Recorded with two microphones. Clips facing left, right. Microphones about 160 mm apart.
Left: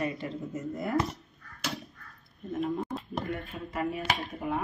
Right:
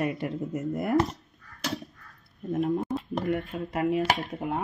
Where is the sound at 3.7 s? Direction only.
65° right (ahead or behind).